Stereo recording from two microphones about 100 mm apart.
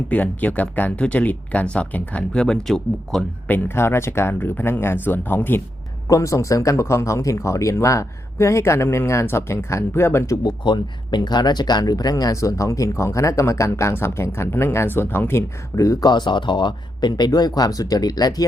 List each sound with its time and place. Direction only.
0.1 s speech: 15° left (ahead or behind)
3.4 s speech: 20° left (ahead or behind)
6.1 s speech: 30° left (ahead or behind)
10.4 s speech: 50° left (ahead or behind)